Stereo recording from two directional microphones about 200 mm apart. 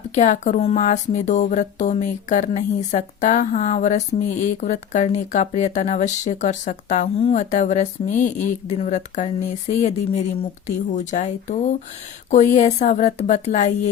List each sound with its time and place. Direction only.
0.1 s speech: 35° left (ahead or behind)